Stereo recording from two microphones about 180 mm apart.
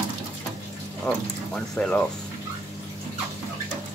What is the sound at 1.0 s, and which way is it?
Speech, 5° left (ahead or behind).